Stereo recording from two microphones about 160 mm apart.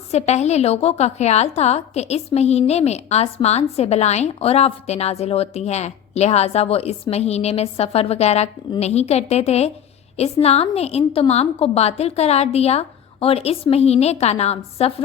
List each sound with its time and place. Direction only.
0.1 s a woman's voice: 45° left (ahead or behind)